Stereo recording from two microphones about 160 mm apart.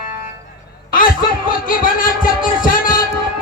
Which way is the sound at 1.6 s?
60° left (ahead or behind).